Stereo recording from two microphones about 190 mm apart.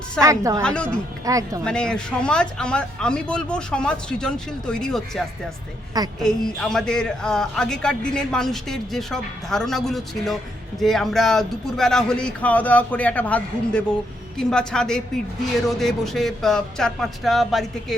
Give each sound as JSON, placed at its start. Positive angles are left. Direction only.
{"t": 0.2, "sound": "speech", "side_deg": -15}
{"t": 0.6, "sound": "a man's voice", "side_deg": 5}
{"t": 1.2, "sound": "speech", "side_deg": -15}
{"t": 1.6, "sound": "a man's voice", "side_deg": 5}
{"t": 6.2, "sound": "a man's voice", "side_deg": 5}